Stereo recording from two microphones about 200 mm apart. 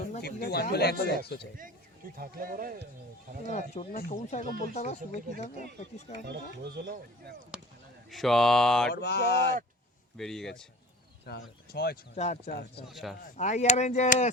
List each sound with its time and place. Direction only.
0.0 s speech: 50° left (ahead or behind)
2.1 s speech: 45° right (ahead or behind)
3.4 s speech: 35° left (ahead or behind)
6.6 s speech: 55° right (ahead or behind)
8.1 s speech: centre (ahead or behind)
8.9 s mantra: 55° left (ahead or behind)
10.2 s speech: centre (ahead or behind)
11.3 s speech: 50° left (ahead or behind)
12.1 s speech: 35° left (ahead or behind)
12.5 s speech: 55° left (ahead or behind)
12.9 s speech: centre (ahead or behind)
13.3 s speech: 35° left (ahead or behind)